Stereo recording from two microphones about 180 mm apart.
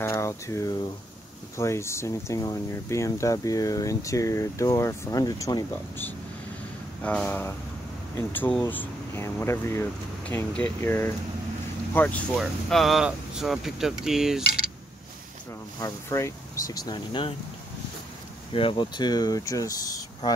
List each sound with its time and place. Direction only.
0.0 s speech: 15° left (ahead or behind)
7.0 s speech: 5° left (ahead or behind)
15.8 s speech: 15° left (ahead or behind)
18.5 s speech: 30° left (ahead or behind)